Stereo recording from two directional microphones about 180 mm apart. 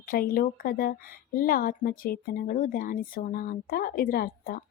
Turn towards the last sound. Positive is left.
turn(degrees=55)  # may be behind; listen again after turning